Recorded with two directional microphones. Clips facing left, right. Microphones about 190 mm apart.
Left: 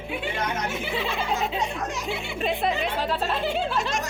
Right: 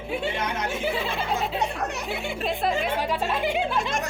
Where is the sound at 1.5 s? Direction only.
60° right (ahead or behind).